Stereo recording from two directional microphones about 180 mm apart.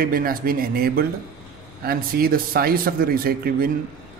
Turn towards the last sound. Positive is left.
turn(degrees=-55)  # may be behind; listen again after turning